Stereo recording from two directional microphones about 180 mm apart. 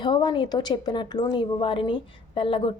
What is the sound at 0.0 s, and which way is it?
A woman's voice, 25° left (ahead or behind).